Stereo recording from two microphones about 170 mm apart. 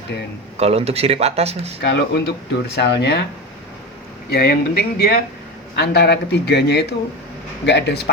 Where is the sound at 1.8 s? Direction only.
90° left.